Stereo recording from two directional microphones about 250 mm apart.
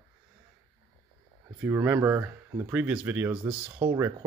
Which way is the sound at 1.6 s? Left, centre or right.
Centre.